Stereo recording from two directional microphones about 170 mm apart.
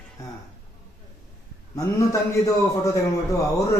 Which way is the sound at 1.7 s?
20° left (ahead or behind).